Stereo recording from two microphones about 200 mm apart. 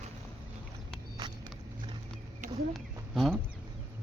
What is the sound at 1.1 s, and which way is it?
Vehicle, 25° right (ahead or behind).